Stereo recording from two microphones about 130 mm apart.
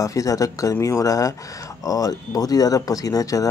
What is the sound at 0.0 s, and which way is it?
Speech, 25° left (ahead or behind).